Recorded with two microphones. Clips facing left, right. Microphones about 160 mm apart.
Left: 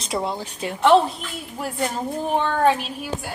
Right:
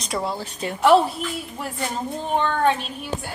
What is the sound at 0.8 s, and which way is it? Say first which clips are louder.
Speech: even; 5° right (ahead or behind).